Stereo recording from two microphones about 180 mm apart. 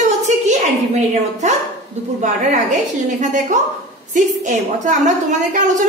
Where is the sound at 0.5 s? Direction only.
40° right (ahead or behind).